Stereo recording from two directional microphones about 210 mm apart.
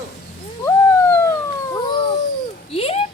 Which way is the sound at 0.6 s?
10° left (ahead or behind).